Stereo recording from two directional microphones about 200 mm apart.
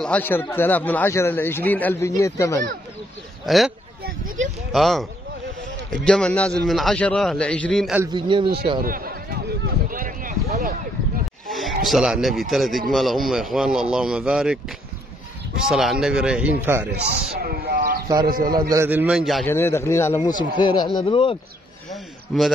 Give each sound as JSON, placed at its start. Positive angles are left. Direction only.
{"t": 0.0, "sound": "speech", "side_deg": 10}
{"t": 3.4, "sound": "speech", "side_deg": 0}
{"t": 4.7, "sound": "speech", "side_deg": 0}
{"t": 6.0, "sound": "speech", "side_deg": 5}
{"t": 8.1, "sound": "speech", "side_deg": -25}
{"t": 8.8, "sound": "a sound", "side_deg": -45}
{"t": 11.5, "sound": "speech", "side_deg": 0}
{"t": 15.7, "sound": "speech", "side_deg": 0}
{"t": 17.4, "sound": "a sound", "side_deg": -50}
{"t": 18.2, "sound": "a man's voice", "side_deg": -45}
{"t": 18.7, "sound": "a man's voice", "side_deg": -10}
{"t": 19.4, "sound": "speech", "side_deg": 10}
{"t": 22.3, "sound": "speech", "side_deg": 0}